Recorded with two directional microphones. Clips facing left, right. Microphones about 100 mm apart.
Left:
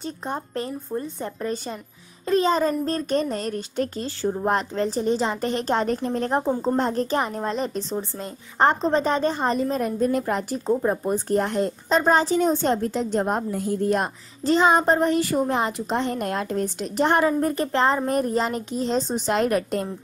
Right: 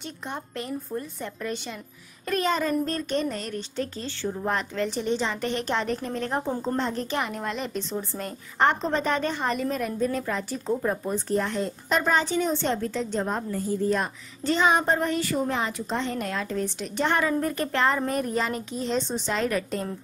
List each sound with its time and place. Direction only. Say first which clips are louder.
0.0 s a child's voice: left 5 dB; 35° left (ahead or behind)
9.9 s a woman's voice: left 4 dB; 50° left (ahead or behind)
10.7 s speech: left 4 dB; 20° left (ahead or behind)
11.1 s a woman's voice: left 4 dB; 50° left (ahead or behind)
11.9 s a child's voice: left 4 dB; 35° left (ahead or behind)
13.3 s a woman's voice: left 3 dB; 70° left (ahead or behind)
14.4 s a child's voice: left 4 dB; 35° left (ahead or behind)
15.5 s a woman's voice: left 4 dB; 50° left (ahead or behind); by 19.1 s 35° left (ahead or behind)
19.2 s a woman's voice: left 5 dB; 50° left (ahead or behind)